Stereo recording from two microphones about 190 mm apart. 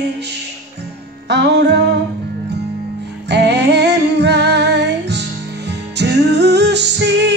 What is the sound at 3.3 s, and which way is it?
Female singing, 65° right (ahead or behind).